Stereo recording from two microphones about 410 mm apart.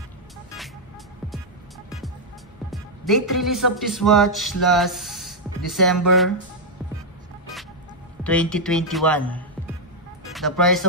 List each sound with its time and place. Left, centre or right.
2.7 s speech: centre
8.2 s a man's voice: centre